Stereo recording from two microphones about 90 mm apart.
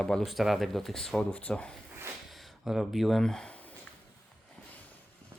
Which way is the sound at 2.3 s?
Centre (ahead or behind).